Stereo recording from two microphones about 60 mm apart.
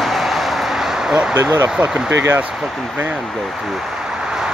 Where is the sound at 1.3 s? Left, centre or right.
Right.